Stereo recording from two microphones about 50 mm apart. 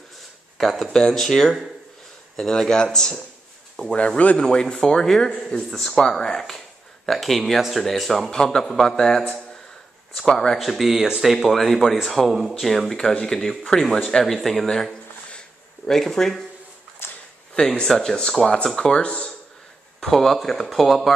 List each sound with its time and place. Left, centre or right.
0.6 s speech: centre
14.2 s speech: centre
17.0 s a sound: left
17.6 s speech: left
18.9 s speech: left
20.1 s speech: centre